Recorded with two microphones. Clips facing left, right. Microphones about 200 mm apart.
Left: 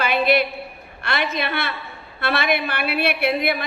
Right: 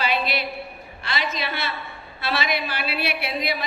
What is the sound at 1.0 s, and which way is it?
A woman's voice, 60° left (ahead or behind).